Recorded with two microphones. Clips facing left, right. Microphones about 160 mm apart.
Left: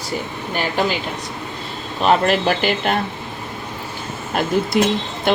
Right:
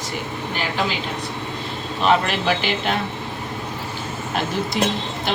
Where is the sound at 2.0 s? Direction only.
45° left (ahead or behind).